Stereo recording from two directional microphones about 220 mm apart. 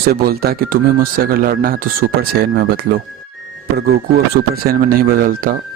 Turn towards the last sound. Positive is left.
turn(degrees=-40)  # may be behind; listen again after turning